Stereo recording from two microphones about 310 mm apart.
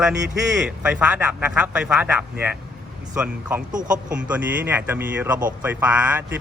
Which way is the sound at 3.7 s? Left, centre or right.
Right.